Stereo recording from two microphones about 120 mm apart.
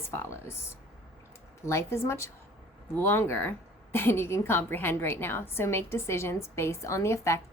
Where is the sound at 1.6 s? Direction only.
20° left (ahead or behind).